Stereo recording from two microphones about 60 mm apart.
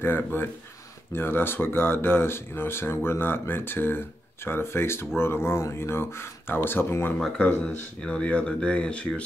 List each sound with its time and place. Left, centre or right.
0.0 s speech: left
8.0 s speech: left